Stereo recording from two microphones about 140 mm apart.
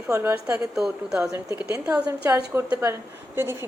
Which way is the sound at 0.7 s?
5° right (ahead or behind).